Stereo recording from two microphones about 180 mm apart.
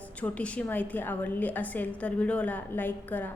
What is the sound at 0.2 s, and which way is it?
A woman's voice, 5° left (ahead or behind).